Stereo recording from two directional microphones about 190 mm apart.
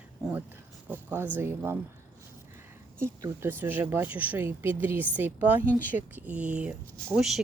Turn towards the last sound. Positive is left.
turn(degrees=-5)  # may be behind; listen again after turning